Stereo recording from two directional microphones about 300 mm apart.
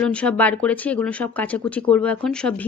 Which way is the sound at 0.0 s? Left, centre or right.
Centre.